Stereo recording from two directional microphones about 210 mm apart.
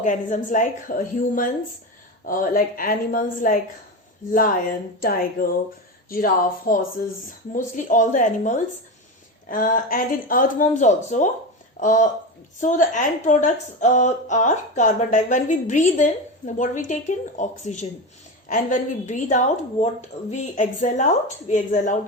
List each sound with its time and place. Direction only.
0.0 s speech: 35° left (ahead or behind)